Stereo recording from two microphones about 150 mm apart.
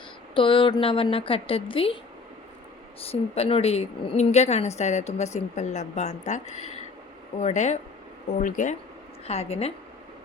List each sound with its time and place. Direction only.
0.3 s a woman's voice: 35° left (ahead or behind)
3.0 s a woman's voice: 40° left (ahead or behind); by 8.7 s 60° left (ahead or behind)
9.2 s a woman's voice: 45° left (ahead or behind)